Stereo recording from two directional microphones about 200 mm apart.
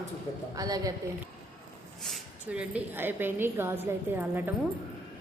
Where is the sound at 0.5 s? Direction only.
20° right (ahead or behind).